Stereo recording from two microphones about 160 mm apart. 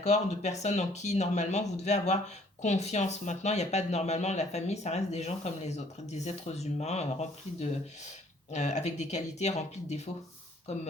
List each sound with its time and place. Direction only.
0.0 s speech: 45° left (ahead or behind)